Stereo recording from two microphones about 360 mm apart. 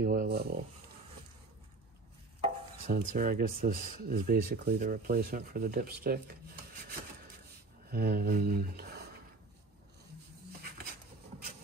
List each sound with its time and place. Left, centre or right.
0.0 s stir: right
2.4 s stir: right
7.9 s speech: right